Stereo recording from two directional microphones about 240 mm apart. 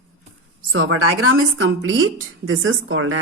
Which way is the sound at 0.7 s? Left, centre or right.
Right.